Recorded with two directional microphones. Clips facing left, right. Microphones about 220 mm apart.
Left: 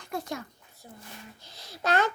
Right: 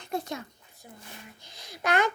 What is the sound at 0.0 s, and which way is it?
A child's voice, 20° right (ahead or behind).